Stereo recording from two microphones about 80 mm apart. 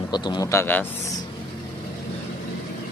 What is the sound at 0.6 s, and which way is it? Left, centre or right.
Speech, left.